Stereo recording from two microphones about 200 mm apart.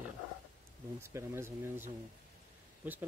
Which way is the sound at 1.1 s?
15° right (ahead or behind).